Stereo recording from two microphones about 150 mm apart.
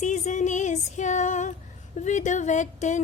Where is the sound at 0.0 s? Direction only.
55° left (ahead or behind).